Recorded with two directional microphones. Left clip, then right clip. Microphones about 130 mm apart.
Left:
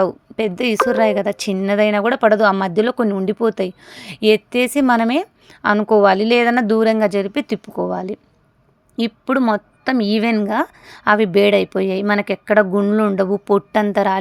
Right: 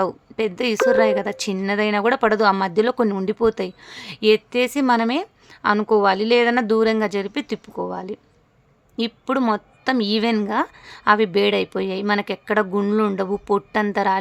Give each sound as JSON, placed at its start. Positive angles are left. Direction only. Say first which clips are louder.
{"t": 0.0, "sound": "a woman's voice", "louder": "left 4 dB", "side_deg": 25}